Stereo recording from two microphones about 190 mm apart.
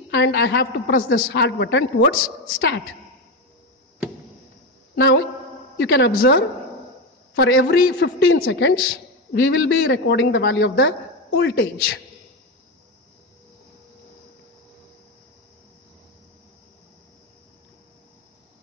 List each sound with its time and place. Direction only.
0.1 s a man's voice: 65° left (ahead or behind); by 1.2 s 90° left
1.2 s a man's voice: 65° left (ahead or behind)
4.9 s a woman's voice: 65° left (ahead or behind)
6.1 s a woman's voice: 55° left (ahead or behind)
7.3 s a man's voice: 70° left (ahead or behind); by 8.5 s 55° left (ahead or behind)
8.5 s a woman's voice: 85° left
9.3 s a man's voice: 70° left (ahead or behind)